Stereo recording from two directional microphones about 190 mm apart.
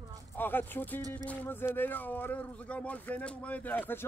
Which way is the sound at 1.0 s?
20° right (ahead or behind).